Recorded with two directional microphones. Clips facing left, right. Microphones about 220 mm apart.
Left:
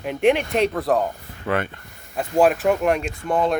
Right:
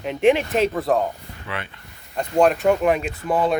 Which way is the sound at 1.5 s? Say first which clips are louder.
Left 9 dB; 50° left (ahead or behind).